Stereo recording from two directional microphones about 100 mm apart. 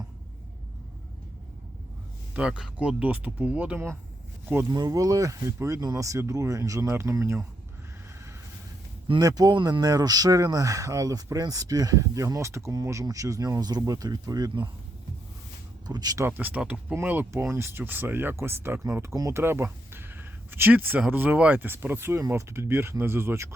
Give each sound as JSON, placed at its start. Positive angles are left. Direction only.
{"t": 2.3, "sound": "speech", "side_deg": -10}
{"t": 4.7, "sound": "speech", "side_deg": -40}
{"t": 9.1, "sound": "speech", "side_deg": -40}
{"t": 9.8, "sound": "speech", "side_deg": -40}
{"t": 15.9, "sound": "speech", "side_deg": -40}
{"t": 16.2, "sound": "speech", "side_deg": -15}
{"t": 19.1, "sound": "speech", "side_deg": -35}
{"t": 19.4, "sound": "speech", "side_deg": -25}